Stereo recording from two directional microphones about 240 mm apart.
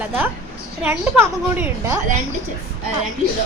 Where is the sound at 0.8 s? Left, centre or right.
Centre.